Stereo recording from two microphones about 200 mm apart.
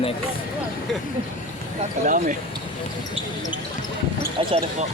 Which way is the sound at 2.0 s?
40° right (ahead or behind).